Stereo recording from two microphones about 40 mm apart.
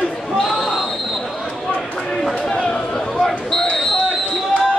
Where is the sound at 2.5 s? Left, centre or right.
Left.